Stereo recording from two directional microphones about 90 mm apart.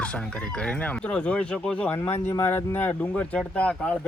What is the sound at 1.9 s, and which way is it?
Speech, 30° left (ahead or behind).